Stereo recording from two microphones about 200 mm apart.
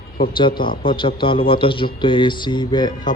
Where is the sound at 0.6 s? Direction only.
25° left (ahead or behind).